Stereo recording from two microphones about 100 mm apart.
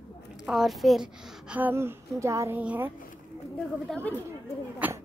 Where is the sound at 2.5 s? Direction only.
15° right (ahead or behind).